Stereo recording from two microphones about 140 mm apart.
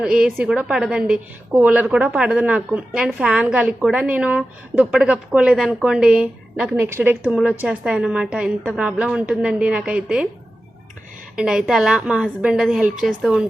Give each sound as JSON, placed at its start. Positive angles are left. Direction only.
{"t": 0.0, "sound": "a woman's voice", "side_deg": -5}
{"t": 11.3, "sound": "a woman's voice", "side_deg": -5}